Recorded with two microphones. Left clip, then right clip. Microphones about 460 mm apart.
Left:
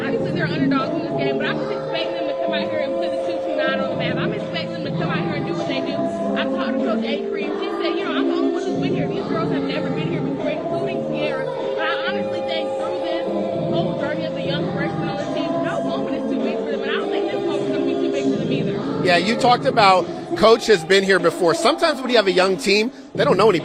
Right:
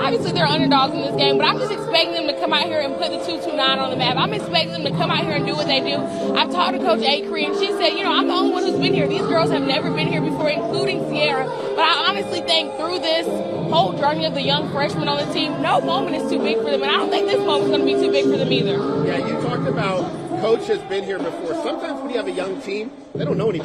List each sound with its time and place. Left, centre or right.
0.3 s a sound: right
3.6 s speech: right
11.8 s speech: right
19.1 s speech: left
21.7 s a man's voice: left
23.2 s speech: left